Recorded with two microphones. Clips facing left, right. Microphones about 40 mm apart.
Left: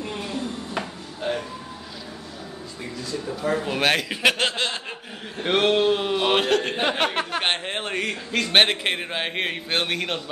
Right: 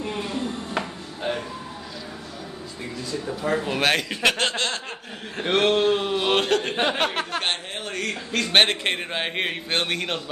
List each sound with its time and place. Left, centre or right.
0.0 s a sound: centre
3.3 s speech: centre
7.4 s speech: left
8.3 s speech: centre